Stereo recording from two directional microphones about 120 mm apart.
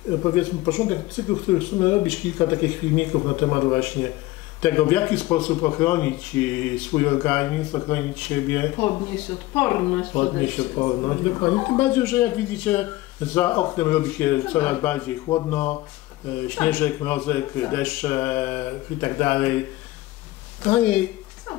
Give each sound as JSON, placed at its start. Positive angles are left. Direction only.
{"t": 0.1, "sound": "speech", "side_deg": 25}
{"t": 3.1, "sound": "speech", "side_deg": 25}
{"t": 10.7, "sound": "speech", "side_deg": 30}
{"t": 11.8, "sound": "speech", "side_deg": 10}
{"t": 15.2, "sound": "speech", "side_deg": 30}
{"t": 15.5, "sound": "speech", "side_deg": 15}